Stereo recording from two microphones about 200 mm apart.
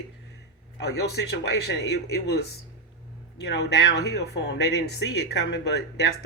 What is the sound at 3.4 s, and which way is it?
Speech, 55° left (ahead or behind).